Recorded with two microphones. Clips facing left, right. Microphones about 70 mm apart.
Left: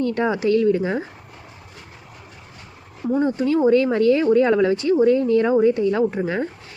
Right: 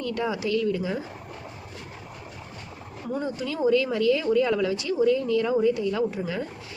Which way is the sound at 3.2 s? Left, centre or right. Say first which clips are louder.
Left 9 dB; left.